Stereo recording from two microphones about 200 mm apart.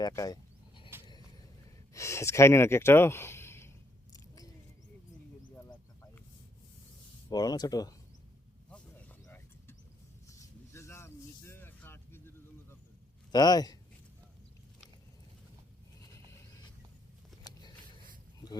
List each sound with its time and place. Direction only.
0.0 s speech: 20° left (ahead or behind)
0.9 s vehicle: 10° right (ahead or behind)
1.9 s speech: 15° left (ahead or behind)
7.3 s speech: 20° left (ahead or behind)
8.7 s a sound: 10° left (ahead or behind)
13.3 s speech: 20° left (ahead or behind)